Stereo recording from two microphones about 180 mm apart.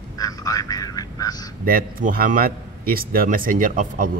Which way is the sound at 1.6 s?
50° right (ahead or behind).